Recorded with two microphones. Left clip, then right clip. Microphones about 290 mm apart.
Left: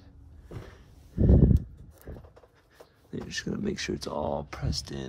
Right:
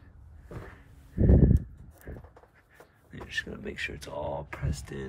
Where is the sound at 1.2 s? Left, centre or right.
Right.